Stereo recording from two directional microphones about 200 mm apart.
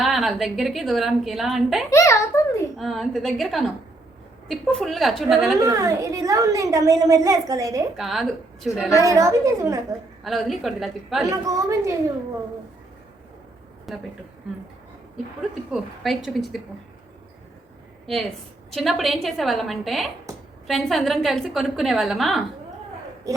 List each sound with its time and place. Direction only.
0.0 s a woman's voice: centre (ahead or behind)
1.9 s a sound: 15° left (ahead or behind)
2.7 s a woman's voice: centre (ahead or behind)
5.5 s a woman's voice: 15° right (ahead or behind)
7.9 s a woman's voice: centre (ahead or behind)
9.0 s a woman's voice: 15° right (ahead or behind)
10.2 s a woman's voice: centre (ahead or behind)
11.3 s a woman's voice: 15° right (ahead or behind)
13.9 s a woman's voice: centre (ahead or behind)
15.7 s a woman's voice: centre (ahead or behind)
18.0 s a woman's voice: centre (ahead or behind)